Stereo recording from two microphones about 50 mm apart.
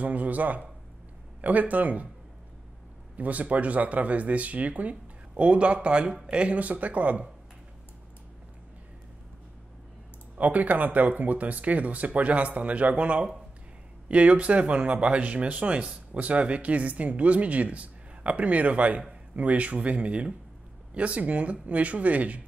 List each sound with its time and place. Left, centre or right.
0.0 s speech: right
3.2 s speech: right
10.3 s speech: right